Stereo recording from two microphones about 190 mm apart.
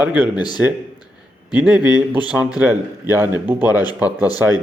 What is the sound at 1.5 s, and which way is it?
Speech, 5° right (ahead or behind).